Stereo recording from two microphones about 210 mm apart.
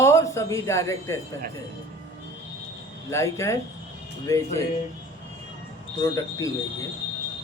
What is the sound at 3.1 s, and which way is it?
A man's voice, 15° left (ahead or behind).